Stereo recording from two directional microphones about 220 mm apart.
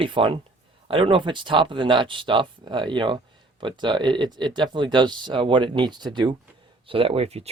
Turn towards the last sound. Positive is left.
turn(degrees=-25)  # may be behind; listen again after turning